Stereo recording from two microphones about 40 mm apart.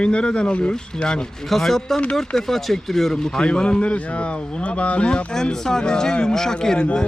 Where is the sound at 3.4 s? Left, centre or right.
Left.